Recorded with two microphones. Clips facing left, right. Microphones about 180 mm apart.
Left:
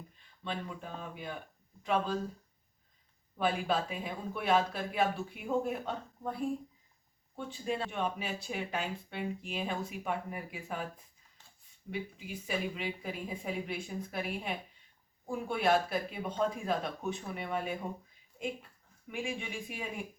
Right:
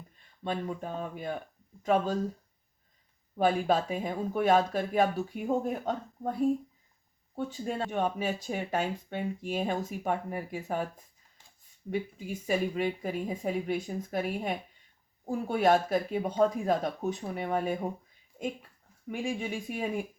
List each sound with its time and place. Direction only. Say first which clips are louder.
0.4 s speech: right 6 dB; 45° right (ahead or behind)
3.3 s speech: right 5 dB; 45° right (ahead or behind)
11.9 s speech: right 6 dB; 45° right (ahead or behind)
19.1 s speech: right 5 dB; 40° right (ahead or behind)